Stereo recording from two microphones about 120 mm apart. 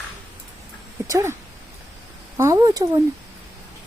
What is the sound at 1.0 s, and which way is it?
Speech, 25° right (ahead or behind).